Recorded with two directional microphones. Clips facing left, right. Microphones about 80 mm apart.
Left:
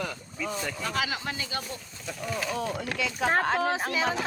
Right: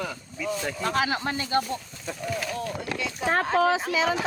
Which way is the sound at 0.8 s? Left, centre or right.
Right.